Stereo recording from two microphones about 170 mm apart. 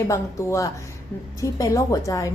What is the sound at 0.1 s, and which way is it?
A woman's voice, 15° left (ahead or behind).